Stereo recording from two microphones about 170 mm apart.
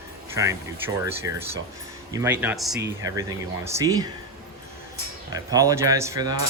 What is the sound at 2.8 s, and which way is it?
Speech, 20° right (ahead or behind).